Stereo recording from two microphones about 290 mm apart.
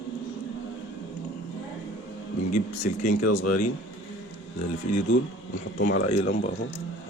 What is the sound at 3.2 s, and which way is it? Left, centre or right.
Speech, left.